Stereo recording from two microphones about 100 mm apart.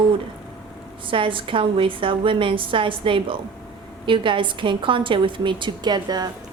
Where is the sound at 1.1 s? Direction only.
60° right (ahead or behind).